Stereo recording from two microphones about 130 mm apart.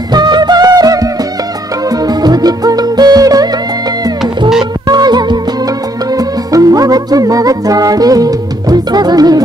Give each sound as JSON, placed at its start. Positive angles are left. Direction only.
{"t": 0.1, "sound": "music", "side_deg": -35}
{"t": 4.8, "sound": "music", "side_deg": -30}